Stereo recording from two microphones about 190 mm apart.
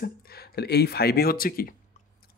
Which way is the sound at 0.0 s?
55° left (ahead or behind).